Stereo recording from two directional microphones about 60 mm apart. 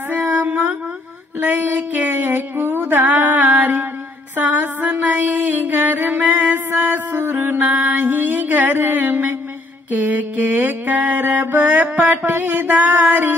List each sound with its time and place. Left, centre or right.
0.1 s a sound: right
1.4 s music: right
9.8 s mantra: right